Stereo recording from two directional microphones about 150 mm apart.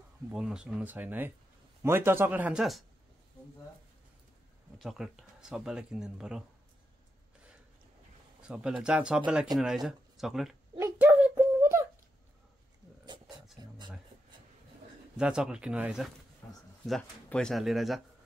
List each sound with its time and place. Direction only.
0.3 s speech: 5° right (ahead or behind)
4.7 s speech: centre (ahead or behind)
8.4 s speech: 5° right (ahead or behind)
10.8 s a sound: 15° right (ahead or behind)
15.1 s speech: 5° right (ahead or behind)
16.4 s a sound: 10° left (ahead or behind)
16.8 s speech: 5° left (ahead or behind)